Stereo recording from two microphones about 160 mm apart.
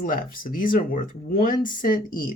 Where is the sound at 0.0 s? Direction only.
55° left (ahead or behind).